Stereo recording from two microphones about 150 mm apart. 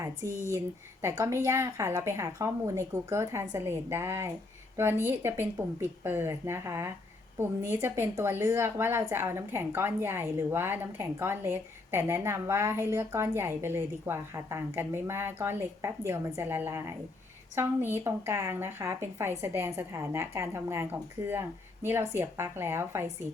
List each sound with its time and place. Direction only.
0.2 s a woman's voice: 20° right (ahead or behind)